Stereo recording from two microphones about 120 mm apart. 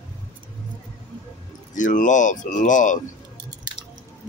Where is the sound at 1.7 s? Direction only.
90° left.